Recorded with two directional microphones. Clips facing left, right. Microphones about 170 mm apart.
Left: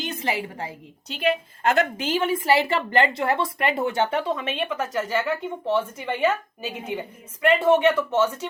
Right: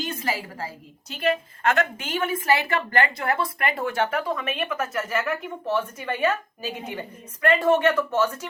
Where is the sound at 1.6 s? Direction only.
30° left (ahead or behind).